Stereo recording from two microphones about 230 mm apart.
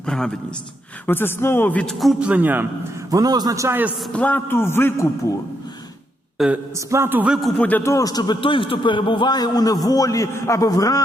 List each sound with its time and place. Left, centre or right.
0.0 s a man's voice: centre
4.1 s a man's voice: centre
6.4 s a man's voice: centre